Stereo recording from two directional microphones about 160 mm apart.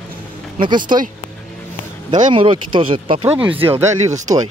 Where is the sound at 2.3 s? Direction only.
30° right (ahead or behind).